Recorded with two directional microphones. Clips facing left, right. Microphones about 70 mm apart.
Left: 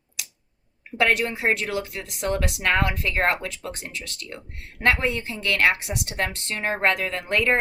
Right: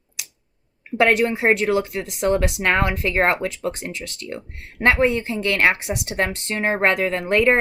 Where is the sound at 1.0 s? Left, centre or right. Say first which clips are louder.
Right 5 dB; right.